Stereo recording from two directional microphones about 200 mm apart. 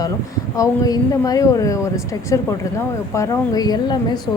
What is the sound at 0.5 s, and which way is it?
A woman's voice, 15° left (ahead or behind).